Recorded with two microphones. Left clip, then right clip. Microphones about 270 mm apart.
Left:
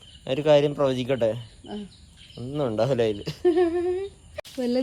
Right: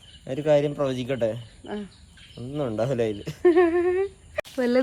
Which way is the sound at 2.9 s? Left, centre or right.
Centre.